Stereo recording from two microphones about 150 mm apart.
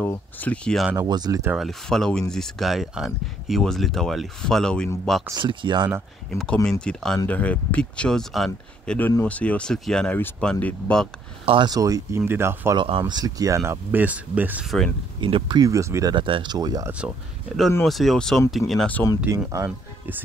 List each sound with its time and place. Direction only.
0.0 s speech: 10° left (ahead or behind)
0.9 s speech: 25° right (ahead or behind)
1.5 s speech: centre (ahead or behind)
5.4 s speech: 35° right (ahead or behind)
6.3 s speech: 5° left (ahead or behind)
11.4 s speech: 30° right (ahead or behind)
12.7 s speech: 35° right (ahead or behind)
13.0 s speech: 25° right (ahead or behind)
15.1 s speech: 35° right (ahead or behind)
17.8 s speech: centre (ahead or behind)
19.2 s speech: 15° right (ahead or behind)